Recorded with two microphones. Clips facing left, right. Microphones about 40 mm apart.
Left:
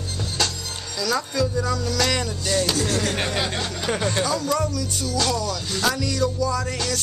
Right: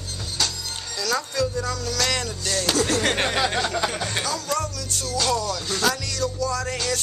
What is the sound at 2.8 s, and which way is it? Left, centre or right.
Speech, right.